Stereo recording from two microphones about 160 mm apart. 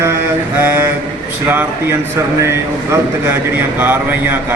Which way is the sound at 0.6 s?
10° right (ahead or behind).